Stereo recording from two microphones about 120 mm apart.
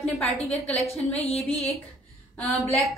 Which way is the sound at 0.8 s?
60° left (ahead or behind).